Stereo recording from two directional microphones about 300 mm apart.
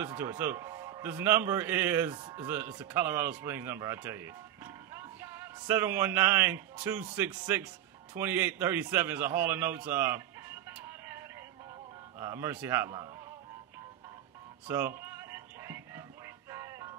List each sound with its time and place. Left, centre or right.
0.0 s a man's voice: centre
14.7 s music: centre